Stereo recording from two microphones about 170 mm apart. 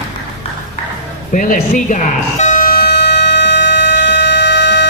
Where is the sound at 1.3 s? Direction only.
50° left (ahead or behind); by 4.9 s 90° left.